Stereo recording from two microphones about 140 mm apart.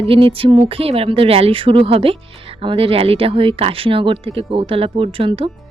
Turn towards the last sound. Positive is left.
turn(degrees=-40)  # may be behind; listen again after turning